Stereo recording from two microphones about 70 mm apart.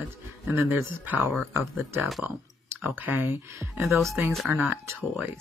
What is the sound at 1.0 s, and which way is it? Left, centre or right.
Speech, right.